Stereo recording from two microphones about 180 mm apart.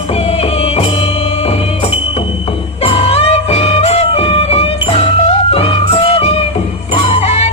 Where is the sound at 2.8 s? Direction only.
35° left (ahead or behind).